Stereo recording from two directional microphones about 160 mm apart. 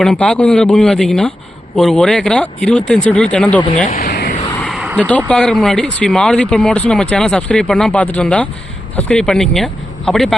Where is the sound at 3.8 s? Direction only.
60° left (ahead or behind); by 4.3 s 75° left (ahead or behind).